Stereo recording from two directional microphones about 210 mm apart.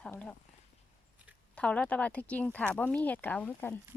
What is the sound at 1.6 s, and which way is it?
Speech, 5° left (ahead or behind).